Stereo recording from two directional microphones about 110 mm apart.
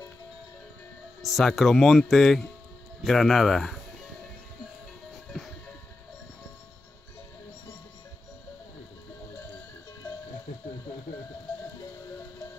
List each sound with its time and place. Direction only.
1.2 s speech: centre (ahead or behind)
5.3 s music: centre (ahead or behind)